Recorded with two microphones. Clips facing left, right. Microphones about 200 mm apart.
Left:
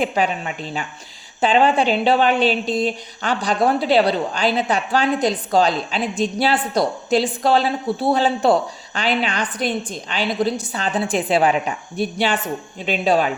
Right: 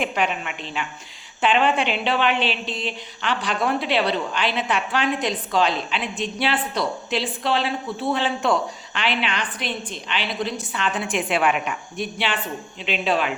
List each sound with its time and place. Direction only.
0.0 s a woman's voice: 35° left (ahead or behind)